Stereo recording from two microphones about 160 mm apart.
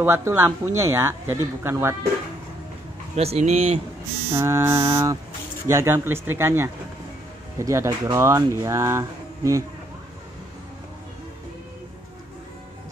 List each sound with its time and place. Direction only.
0.0 s speech: 15° right (ahead or behind)
3.2 s speech: 40° right (ahead or behind)
4.3 s speech: 15° right (ahead or behind)